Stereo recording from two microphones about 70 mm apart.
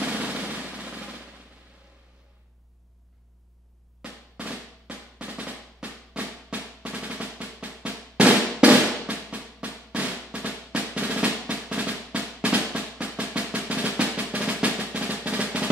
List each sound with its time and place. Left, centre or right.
0.0 s drum: centre
4.0 s drum: right
13.2 s drum roll: right